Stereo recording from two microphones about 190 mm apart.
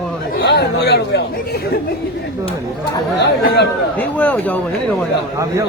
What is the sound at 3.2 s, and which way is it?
Speech, 60° left (ahead or behind).